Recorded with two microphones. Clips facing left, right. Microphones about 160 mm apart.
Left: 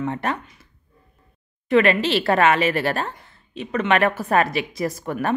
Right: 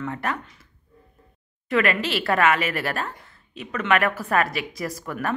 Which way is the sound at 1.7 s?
25° left (ahead or behind).